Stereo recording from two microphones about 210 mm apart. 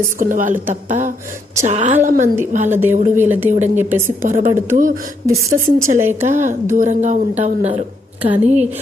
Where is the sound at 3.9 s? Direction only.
10° right (ahead or behind).